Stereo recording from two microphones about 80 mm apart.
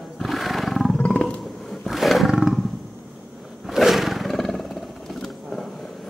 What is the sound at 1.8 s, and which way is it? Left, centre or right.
Roar, centre.